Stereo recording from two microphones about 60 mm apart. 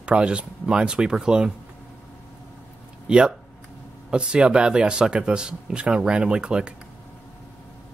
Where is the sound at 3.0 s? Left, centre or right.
Centre.